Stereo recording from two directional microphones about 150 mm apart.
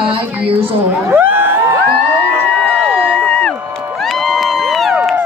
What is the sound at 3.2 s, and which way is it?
Crowd, 5° left (ahead or behind).